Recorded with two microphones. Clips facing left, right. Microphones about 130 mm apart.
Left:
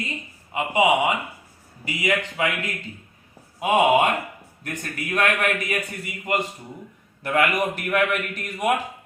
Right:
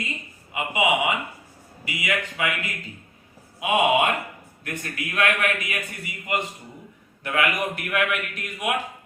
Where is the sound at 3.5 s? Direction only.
40° left (ahead or behind).